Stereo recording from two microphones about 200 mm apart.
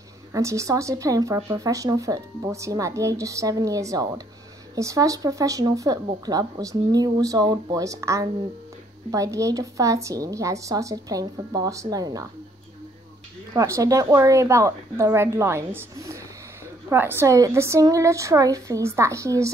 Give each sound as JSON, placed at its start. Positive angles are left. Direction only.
{"t": 0.3, "sound": "speech", "side_deg": -15}
{"t": 13.5, "sound": "speech", "side_deg": -15}